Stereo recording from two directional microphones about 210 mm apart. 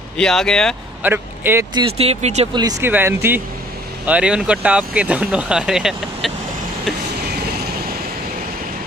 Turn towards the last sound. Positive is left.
turn(degrees=-50)  # may be behind; listen again after turning